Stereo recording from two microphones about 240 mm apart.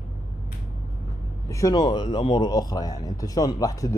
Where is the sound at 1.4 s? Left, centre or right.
Centre.